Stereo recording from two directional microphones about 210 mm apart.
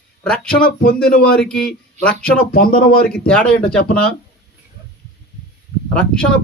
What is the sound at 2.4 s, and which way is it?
Speech, 45° left (ahead or behind).